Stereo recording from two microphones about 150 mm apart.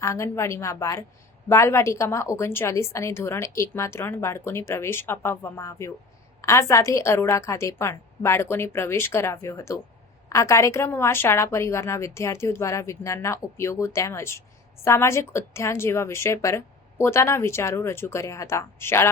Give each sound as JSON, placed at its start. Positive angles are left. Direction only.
{"t": 0.0, "sound": "a woman's voice", "side_deg": 20}